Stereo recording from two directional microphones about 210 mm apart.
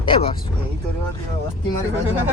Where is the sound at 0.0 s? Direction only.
25° left (ahead or behind).